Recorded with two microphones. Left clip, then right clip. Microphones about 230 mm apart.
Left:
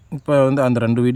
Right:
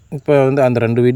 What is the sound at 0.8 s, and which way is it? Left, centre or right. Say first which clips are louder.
Speech: right 5 dB; left.